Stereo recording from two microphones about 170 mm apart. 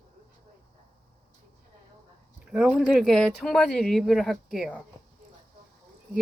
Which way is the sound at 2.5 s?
5° right (ahead or behind).